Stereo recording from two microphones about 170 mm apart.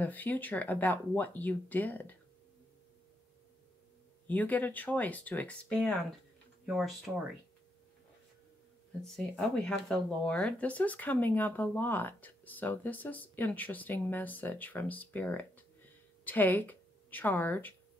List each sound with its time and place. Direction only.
0.0 s speech: 10° left (ahead or behind)
4.3 s speech: 10° left (ahead or behind)
9.0 s speech: 5° left (ahead or behind)